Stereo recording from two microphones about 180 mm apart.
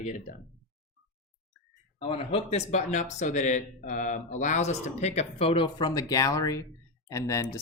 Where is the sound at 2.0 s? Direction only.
30° left (ahead or behind).